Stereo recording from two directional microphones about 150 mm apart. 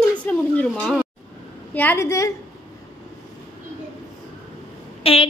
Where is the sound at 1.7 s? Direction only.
10° left (ahead or behind).